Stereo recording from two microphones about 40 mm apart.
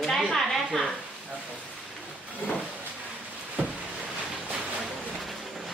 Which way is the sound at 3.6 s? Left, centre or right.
Right.